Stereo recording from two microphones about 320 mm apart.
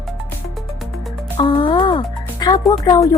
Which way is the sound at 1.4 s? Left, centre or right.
Centre.